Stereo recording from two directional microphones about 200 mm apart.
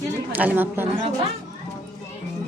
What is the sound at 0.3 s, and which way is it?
Speech, 10° right (ahead or behind).